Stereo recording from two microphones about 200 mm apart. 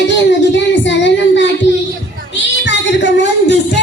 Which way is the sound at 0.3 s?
65° left (ahead or behind).